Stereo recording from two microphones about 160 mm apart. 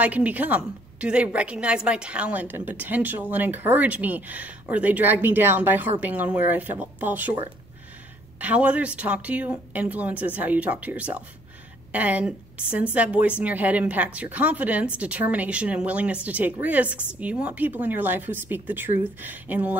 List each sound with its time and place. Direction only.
0.0 s a woman's voice: 10° right (ahead or behind)
8.4 s a woman's voice: 10° right (ahead or behind)